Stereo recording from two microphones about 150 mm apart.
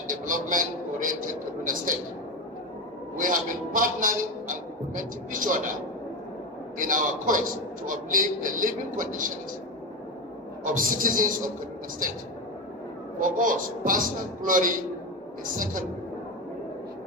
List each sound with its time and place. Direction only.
0.1 s a man's voice: 60° right (ahead or behind)
3.2 s a man's voice: 65° right (ahead or behind)
6.7 s a man's voice: 65° right (ahead or behind)
10.6 s a man's voice: 65° right (ahead or behind)
13.2 s a man's voice: 65° right (ahead or behind)